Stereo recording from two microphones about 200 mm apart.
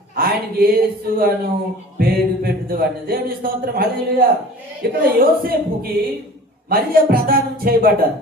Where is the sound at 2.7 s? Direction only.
50° right (ahead or behind).